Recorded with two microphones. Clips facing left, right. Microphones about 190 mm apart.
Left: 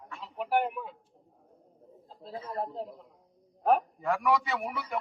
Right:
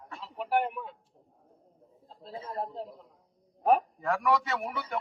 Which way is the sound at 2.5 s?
Centre (ahead or behind).